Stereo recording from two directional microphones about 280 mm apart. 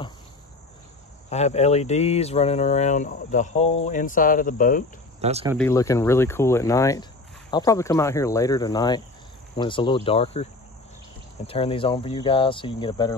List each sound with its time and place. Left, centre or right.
1.3 s speech: left
5.2 s speech: right
5.6 s speech: centre